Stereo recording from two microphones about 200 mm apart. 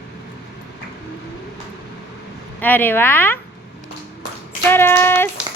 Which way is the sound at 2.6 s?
10° left (ahead or behind).